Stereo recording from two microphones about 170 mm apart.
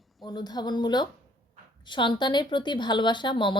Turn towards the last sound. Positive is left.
turn(degrees=30)  # may be behind; listen again after turning